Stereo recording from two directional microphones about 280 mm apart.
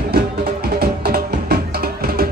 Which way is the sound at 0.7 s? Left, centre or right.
Right.